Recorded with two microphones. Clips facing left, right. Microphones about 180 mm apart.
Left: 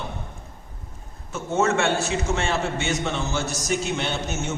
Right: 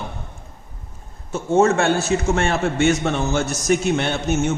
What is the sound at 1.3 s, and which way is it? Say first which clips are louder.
A man's voice: right 6 dB; 30° right (ahead or behind).